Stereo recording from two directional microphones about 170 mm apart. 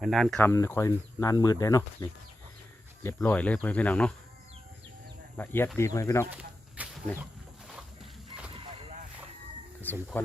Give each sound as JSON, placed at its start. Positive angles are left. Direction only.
{"t": 0.0, "sound": "speech", "side_deg": 0}
{"t": 0.3, "sound": "speech", "side_deg": 15}
{"t": 5.4, "sound": "speech", "side_deg": 10}
{"t": 6.8, "sound": "a sound", "side_deg": -10}
{"t": 9.8, "sound": "speech", "side_deg": 10}